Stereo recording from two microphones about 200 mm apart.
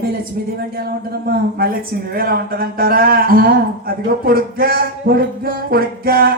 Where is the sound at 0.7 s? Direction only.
50° right (ahead or behind).